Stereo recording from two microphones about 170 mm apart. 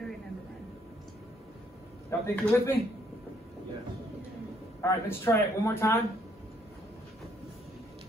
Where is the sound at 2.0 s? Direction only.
15° left (ahead or behind).